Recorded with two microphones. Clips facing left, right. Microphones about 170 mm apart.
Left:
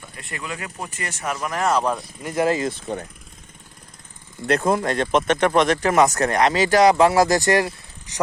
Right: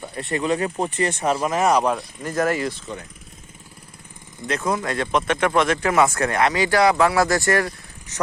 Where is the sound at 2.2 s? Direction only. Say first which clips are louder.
Left 1 dB; 15° left (ahead or behind).